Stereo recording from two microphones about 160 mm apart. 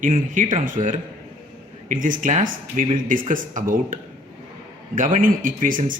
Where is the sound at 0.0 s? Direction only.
55° right (ahead or behind).